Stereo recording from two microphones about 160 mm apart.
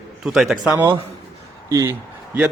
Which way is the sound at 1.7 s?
20° right (ahead or behind).